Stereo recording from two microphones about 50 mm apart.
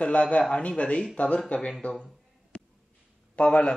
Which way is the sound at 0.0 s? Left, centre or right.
Left.